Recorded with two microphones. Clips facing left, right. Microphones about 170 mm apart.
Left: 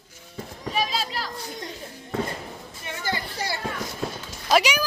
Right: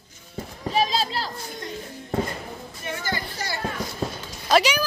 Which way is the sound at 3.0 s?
25° left (ahead or behind).